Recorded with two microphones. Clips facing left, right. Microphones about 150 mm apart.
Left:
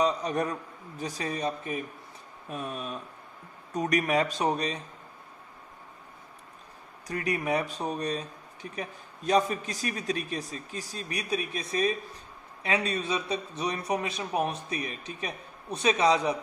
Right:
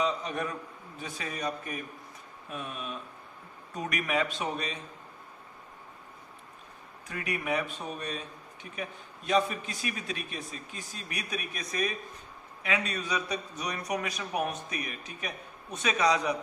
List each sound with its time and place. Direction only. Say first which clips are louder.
0.0 s a man's voice: left 4 dB; 40° left (ahead or behind)
2.5 s speech: left 3 dB; 40° left (ahead or behind)
7.1 s a man's voice: left 4 dB; 35° left (ahead or behind)